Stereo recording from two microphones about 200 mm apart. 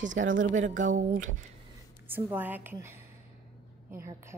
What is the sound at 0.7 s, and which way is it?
Speech, 40° right (ahead or behind).